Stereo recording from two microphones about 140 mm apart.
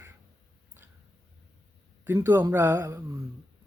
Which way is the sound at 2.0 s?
15° right (ahead or behind).